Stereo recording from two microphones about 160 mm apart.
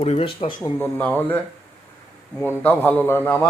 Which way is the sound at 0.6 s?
10° left (ahead or behind).